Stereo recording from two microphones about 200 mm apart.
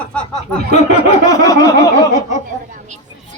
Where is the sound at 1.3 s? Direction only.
15° left (ahead or behind).